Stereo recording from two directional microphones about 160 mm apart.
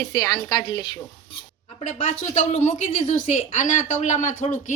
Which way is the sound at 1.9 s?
50° left (ahead or behind).